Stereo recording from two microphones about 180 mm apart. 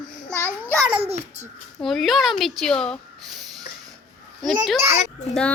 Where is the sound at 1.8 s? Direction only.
Centre (ahead or behind).